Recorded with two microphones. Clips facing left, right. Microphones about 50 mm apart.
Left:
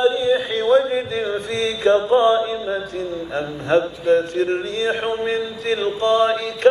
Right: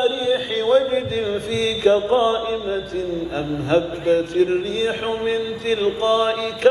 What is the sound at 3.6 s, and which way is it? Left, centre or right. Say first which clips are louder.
Chant: left 1 dB; left.